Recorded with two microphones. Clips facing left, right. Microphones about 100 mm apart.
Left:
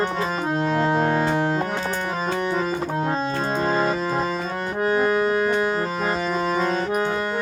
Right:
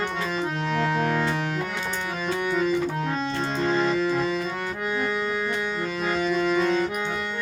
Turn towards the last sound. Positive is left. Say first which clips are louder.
# left 5 dB
turn(degrees=35)  # may be behind; listen again after turning